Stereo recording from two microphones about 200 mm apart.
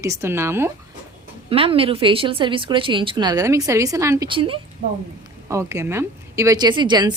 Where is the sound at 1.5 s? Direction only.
25° right (ahead or behind).